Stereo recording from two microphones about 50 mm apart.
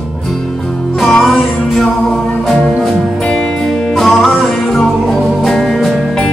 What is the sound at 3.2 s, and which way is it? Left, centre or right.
Music, centre.